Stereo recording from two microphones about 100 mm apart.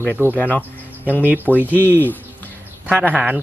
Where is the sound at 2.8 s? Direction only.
15° right (ahead or behind).